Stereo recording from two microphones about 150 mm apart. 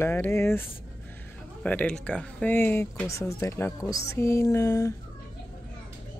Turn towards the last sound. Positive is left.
turn(degrees=20)  # may be behind; listen again after turning